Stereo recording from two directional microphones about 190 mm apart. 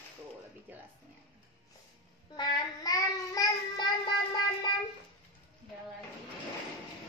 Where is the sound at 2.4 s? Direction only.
20° left (ahead or behind).